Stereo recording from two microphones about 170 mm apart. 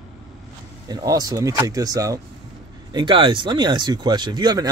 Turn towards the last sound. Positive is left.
turn(degrees=-25)  # may be behind; listen again after turning